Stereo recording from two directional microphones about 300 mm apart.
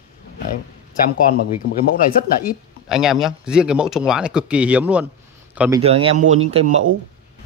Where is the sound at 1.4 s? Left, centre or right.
Left.